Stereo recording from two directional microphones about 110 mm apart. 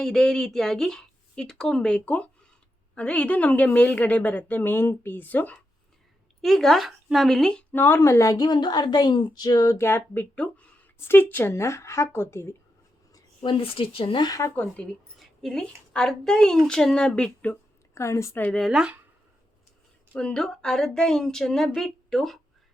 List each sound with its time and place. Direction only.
0.0 s a woman's voice: 5° left (ahead or behind)
6.4 s speech: 5° left (ahead or behind)
7.7 s a woman's voice: 20° left (ahead or behind)
13.4 s speech: 50° left (ahead or behind)
14.3 s a woman's voice: 30° left (ahead or behind)
14.6 s a woman's voice: 10° left (ahead or behind)
17.9 s a woman's voice: 25° left (ahead or behind)
18.4 s speech: centre (ahead or behind)
20.1 s speech: 5° left (ahead or behind)